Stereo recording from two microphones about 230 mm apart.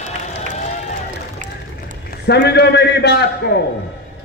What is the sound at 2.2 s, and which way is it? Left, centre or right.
A man's voice, left.